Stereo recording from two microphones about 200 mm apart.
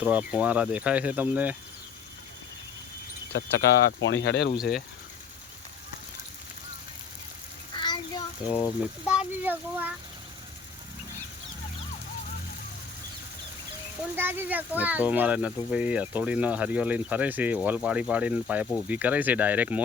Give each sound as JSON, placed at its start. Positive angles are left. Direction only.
{"t": 0.0, "sound": "speech", "side_deg": -5}
{"t": 3.3, "sound": "speech", "side_deg": 60}
{"t": 4.5, "sound": "speech", "side_deg": 0}
{"t": 7.8, "sound": "child singing", "side_deg": 20}
{"t": 8.4, "sound": "speech", "side_deg": -5}
{"t": 14.2, "sound": "speech", "side_deg": -10}